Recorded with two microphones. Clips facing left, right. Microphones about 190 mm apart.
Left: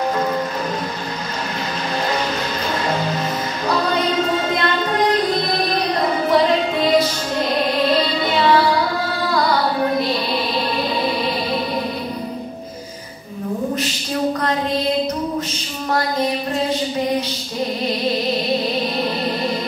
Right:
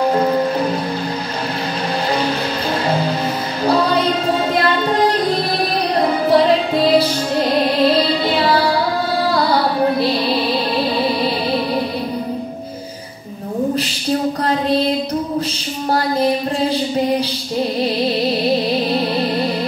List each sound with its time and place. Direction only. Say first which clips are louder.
3.6 s music: right 5 dB; 30° right (ahead or behind)
5.9 s music: right 4 dB; 35° right (ahead or behind)
15.9 s a sound: right 3 dB; 30° right (ahead or behind)